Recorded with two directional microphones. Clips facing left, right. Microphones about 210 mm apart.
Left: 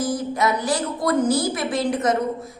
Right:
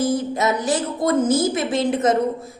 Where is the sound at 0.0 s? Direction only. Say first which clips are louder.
Right 2 dB; 25° right (ahead or behind).